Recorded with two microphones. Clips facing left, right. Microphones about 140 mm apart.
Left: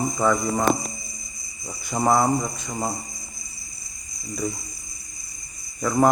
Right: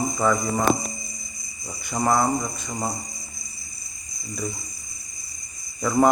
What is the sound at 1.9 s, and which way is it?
Speech, 5° left (ahead or behind).